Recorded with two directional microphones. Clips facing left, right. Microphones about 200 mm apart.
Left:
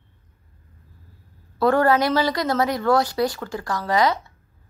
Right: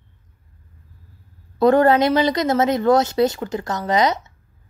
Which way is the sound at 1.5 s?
20° right (ahead or behind).